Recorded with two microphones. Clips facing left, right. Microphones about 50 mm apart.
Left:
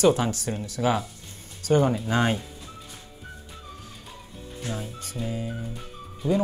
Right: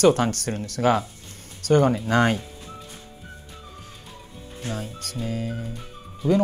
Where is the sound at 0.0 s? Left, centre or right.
Right.